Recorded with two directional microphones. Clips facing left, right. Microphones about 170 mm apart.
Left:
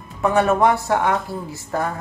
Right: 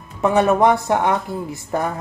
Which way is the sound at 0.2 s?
20° right (ahead or behind).